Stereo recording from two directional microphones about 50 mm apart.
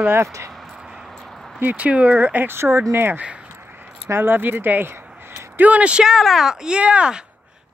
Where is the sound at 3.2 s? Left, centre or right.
Right.